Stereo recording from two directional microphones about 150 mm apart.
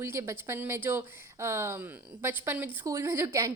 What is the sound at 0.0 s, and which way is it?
A woman's voice, 20° right (ahead or behind).